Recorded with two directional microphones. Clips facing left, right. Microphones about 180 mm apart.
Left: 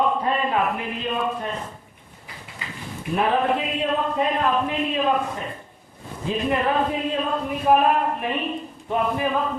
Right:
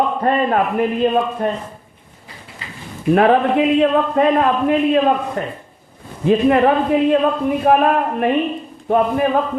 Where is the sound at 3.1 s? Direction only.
70° right (ahead or behind).